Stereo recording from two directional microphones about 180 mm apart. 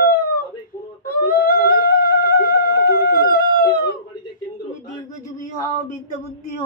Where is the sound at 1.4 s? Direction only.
55° left (ahead or behind).